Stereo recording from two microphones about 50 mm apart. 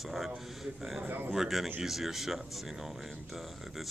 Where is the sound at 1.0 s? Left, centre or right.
Right.